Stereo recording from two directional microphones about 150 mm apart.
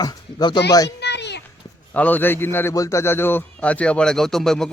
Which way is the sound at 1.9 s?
10° left (ahead or behind).